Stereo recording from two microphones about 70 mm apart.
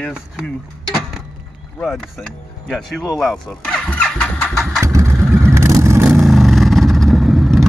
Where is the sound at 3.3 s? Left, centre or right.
Centre.